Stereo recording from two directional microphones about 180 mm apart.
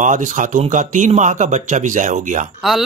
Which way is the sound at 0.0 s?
45° right (ahead or behind).